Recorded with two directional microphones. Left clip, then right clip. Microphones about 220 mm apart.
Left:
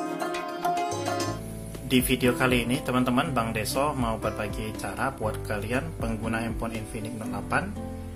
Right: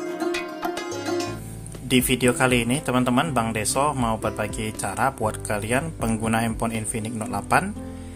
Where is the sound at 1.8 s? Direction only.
25° right (ahead or behind).